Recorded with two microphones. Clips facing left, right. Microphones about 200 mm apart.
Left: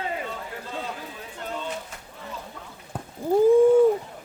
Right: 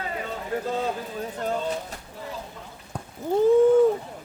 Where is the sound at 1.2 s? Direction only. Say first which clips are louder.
Right 8 dB; 40° right (ahead or behind).